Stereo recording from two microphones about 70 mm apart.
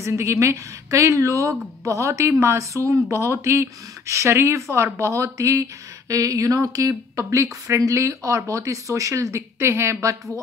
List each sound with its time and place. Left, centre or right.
0.0 s speech: right